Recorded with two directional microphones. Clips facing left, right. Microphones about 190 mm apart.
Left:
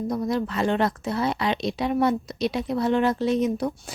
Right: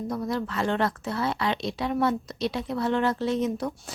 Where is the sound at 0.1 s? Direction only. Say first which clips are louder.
Left 3 dB; 15° left (ahead or behind).